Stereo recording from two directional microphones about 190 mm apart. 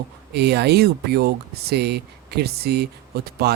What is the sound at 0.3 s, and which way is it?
Speech, 60° right (ahead or behind).